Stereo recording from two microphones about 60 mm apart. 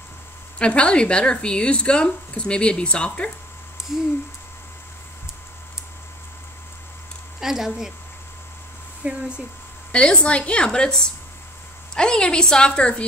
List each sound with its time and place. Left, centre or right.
0.6 s speech: centre
7.3 s speech: centre
9.0 s speech: right
9.9 s speech: centre